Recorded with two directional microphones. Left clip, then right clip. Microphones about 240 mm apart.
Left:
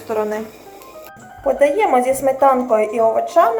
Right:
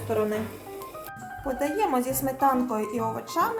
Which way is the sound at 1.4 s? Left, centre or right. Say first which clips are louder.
Left 12 dB; right.